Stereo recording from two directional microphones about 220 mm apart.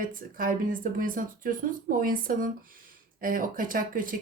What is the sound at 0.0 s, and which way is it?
Speech, 40° right (ahead or behind).